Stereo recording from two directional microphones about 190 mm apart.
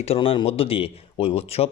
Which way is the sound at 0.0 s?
30° left (ahead or behind).